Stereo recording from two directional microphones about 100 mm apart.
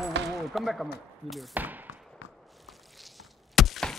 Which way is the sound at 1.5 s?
15° right (ahead or behind).